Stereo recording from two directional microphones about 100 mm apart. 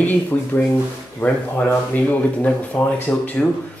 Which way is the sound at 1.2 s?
20° left (ahead or behind).